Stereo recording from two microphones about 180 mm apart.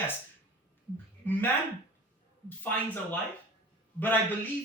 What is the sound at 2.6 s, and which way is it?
A man's voice, 10° left (ahead or behind).